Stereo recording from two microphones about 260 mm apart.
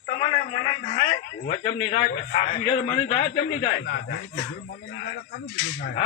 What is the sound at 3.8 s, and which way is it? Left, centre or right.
Speech, left.